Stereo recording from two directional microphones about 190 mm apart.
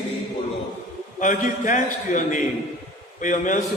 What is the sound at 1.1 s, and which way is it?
A man's voice, 40° left (ahead or behind).